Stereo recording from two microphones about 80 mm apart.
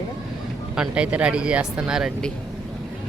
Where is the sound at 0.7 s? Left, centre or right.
Centre.